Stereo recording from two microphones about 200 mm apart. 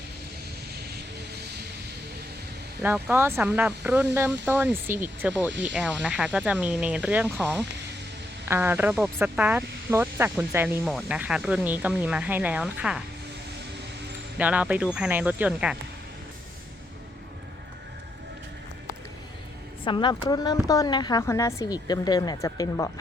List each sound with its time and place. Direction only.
2.8 s speech: 10° right (ahead or behind)
14.3 s speech: 5° right (ahead or behind)
19.8 s a woman's voice: 25° left (ahead or behind)